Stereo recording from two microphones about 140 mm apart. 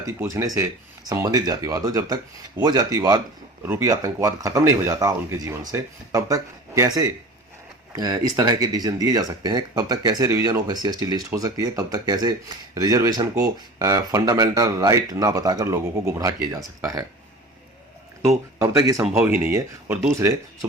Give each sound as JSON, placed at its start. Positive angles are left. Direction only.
{"t": 0.0, "sound": "speech", "side_deg": -20}
{"t": 18.6, "sound": "speech", "side_deg": -20}
{"t": 19.0, "sound": "speech", "side_deg": -5}
{"t": 19.3, "sound": "speech", "side_deg": -20}